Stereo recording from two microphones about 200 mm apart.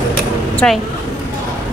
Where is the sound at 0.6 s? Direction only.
5° left (ahead or behind).